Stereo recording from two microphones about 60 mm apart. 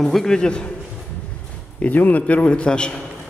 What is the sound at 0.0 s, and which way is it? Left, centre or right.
Speech, centre.